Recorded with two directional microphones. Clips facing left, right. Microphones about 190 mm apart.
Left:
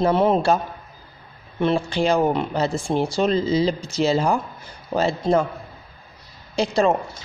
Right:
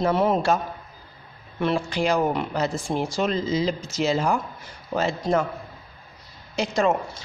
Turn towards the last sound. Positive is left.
turn(degrees=30)  # may be behind; listen again after turning